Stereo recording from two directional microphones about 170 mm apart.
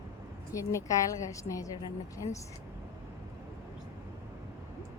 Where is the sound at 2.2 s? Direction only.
35° left (ahead or behind).